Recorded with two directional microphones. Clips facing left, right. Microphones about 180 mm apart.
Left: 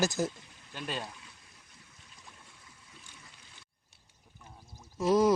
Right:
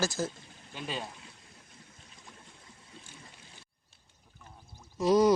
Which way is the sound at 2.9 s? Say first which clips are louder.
Right 5 dB; 35° right (ahead or behind).